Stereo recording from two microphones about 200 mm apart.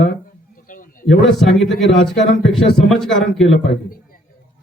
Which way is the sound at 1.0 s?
Centre (ahead or behind).